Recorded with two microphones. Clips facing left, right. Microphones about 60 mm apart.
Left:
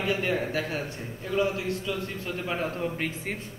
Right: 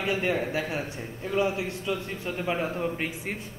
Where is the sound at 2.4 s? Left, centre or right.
Centre.